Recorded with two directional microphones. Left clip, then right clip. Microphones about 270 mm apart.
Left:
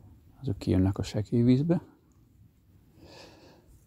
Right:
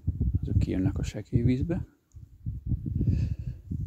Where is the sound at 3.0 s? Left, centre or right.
Centre.